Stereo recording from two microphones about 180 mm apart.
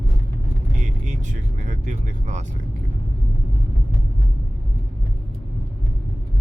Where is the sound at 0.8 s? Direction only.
40° right (ahead or behind).